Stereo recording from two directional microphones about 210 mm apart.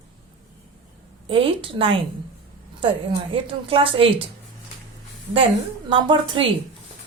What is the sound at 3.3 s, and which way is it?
Speech, 25° right (ahead or behind).